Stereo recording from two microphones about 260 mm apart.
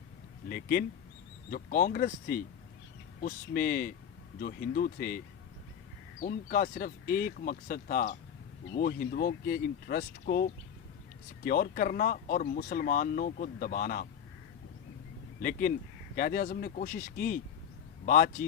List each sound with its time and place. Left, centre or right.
0.4 s speech: left
15.4 s speech: left